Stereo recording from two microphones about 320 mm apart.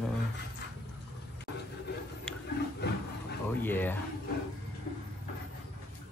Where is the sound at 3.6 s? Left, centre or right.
Centre.